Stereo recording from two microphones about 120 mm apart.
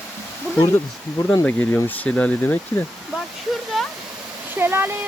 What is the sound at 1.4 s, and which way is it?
Speech, 15° left (ahead or behind).